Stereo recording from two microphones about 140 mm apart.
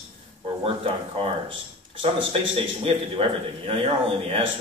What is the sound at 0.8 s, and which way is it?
Speech, 40° right (ahead or behind).